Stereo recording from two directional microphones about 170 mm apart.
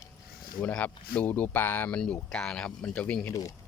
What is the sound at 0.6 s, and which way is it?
Speech, 10° left (ahead or behind).